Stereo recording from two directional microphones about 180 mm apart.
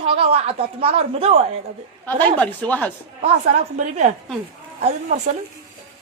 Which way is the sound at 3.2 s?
40° right (ahead or behind).